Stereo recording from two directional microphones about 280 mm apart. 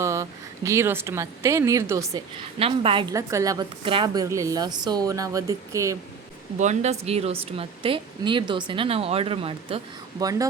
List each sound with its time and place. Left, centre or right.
0.0 s speech: centre
6.6 s speech: right